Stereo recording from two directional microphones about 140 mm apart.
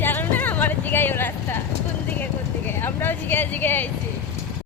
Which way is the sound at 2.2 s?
15° left (ahead or behind).